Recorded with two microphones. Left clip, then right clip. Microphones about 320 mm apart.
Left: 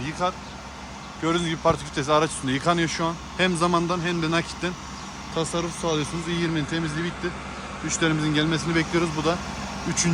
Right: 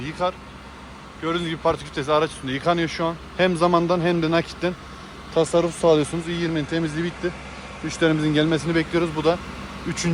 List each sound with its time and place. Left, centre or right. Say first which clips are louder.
0.0 s speech: right 1 dB; centre